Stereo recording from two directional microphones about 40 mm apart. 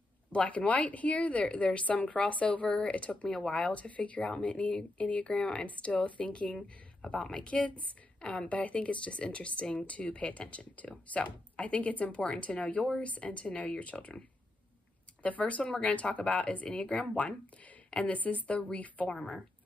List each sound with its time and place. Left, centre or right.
0.3 s a woman's voice: left
3.3 s speech: centre
3.6 s a woman's voice: left
5.8 s a woman's voice: left
15.2 s a woman's voice: left
17.9 s a woman's voice: left